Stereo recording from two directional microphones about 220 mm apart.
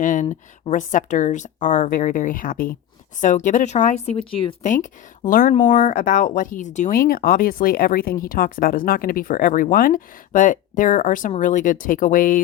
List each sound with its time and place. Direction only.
0.0 s speech: 35° left (ahead or behind)